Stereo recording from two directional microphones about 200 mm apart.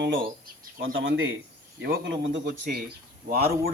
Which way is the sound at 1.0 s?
70° right (ahead or behind).